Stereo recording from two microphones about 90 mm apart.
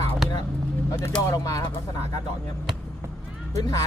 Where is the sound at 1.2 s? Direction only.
40° left (ahead or behind).